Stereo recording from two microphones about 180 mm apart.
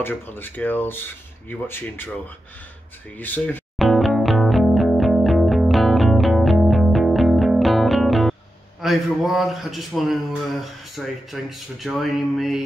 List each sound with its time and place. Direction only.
0.0 s speech: 10° left (ahead or behind)
3.2 s music: 10° left (ahead or behind)
8.8 s speech: centre (ahead or behind)